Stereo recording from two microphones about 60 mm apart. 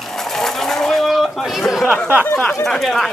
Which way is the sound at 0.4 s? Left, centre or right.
Centre.